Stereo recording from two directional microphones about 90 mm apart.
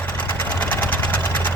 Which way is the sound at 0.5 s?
20° left (ahead or behind).